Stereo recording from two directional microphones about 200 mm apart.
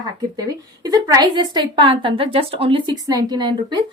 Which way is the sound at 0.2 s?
20° right (ahead or behind).